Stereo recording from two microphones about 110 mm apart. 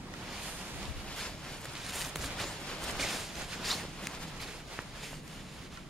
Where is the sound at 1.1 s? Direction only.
5° left (ahead or behind).